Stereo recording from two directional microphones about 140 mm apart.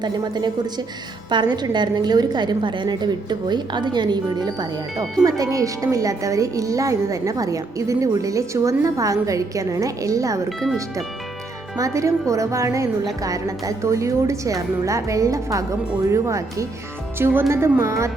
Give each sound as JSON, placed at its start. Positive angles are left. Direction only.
{"t": 0.0, "sound": "a woman's voice", "side_deg": -30}
{"t": 11.8, "sound": "a woman's voice", "side_deg": -20}